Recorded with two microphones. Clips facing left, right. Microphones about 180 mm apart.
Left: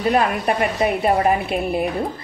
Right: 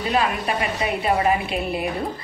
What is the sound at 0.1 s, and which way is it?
Speech, 55° left (ahead or behind).